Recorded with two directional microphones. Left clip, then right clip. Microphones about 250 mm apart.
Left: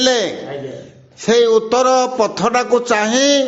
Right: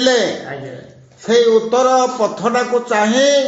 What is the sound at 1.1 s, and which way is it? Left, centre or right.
A man's voice, left.